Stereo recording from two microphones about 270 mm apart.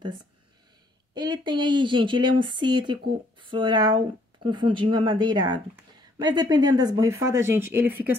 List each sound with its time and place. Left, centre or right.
1.1 s speech: centre